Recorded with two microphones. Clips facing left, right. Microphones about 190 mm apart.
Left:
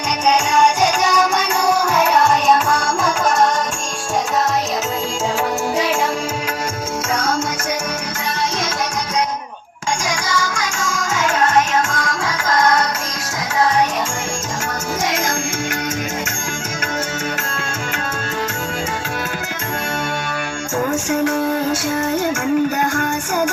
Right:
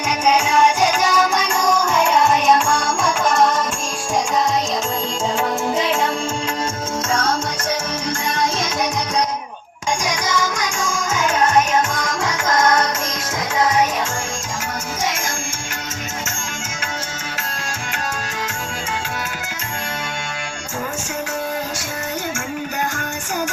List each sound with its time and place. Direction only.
0.3 s music: 5° right (ahead or behind)
10.1 s music: 20° right (ahead or behind)